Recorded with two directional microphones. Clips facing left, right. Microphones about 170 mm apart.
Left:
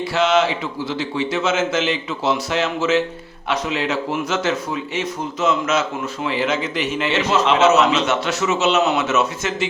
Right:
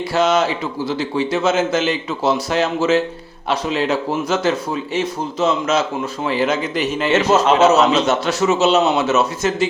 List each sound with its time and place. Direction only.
0.1 s a man's voice: 40° right (ahead or behind)